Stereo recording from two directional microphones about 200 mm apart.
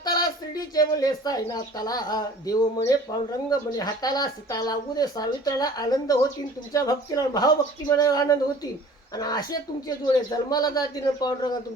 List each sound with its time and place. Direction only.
0.0 s speech: 20° left (ahead or behind)